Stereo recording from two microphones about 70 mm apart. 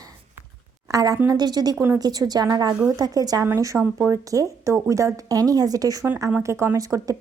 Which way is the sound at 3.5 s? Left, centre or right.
Right.